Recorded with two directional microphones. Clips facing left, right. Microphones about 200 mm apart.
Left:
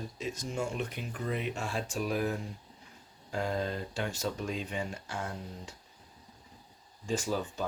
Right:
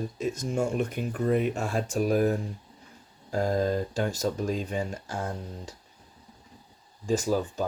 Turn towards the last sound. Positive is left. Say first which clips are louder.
# right 6 dB
turn(degrees=-40)  # may be behind; listen again after turning